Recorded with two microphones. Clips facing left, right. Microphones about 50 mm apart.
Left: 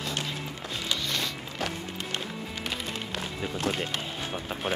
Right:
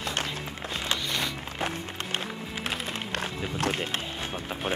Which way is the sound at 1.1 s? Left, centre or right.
Right.